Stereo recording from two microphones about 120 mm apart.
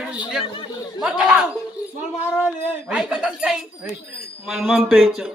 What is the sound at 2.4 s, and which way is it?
A man's voice, 5° right (ahead or behind).